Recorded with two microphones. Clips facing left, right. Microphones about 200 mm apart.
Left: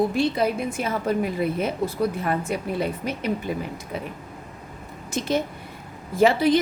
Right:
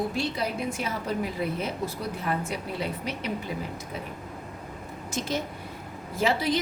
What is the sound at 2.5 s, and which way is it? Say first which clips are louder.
Speech: left 6 dB; 50° left (ahead or behind).